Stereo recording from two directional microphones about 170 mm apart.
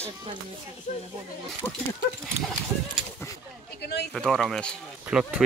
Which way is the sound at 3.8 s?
75° left (ahead or behind).